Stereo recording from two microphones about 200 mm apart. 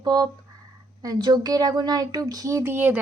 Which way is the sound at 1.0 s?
20° right (ahead or behind).